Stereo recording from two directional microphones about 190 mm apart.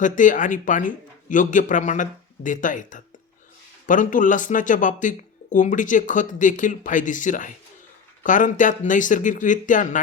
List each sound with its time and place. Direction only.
0.0 s speech: 40° left (ahead or behind)